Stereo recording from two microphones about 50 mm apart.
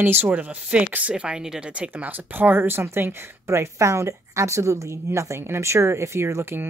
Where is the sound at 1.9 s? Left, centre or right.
Right.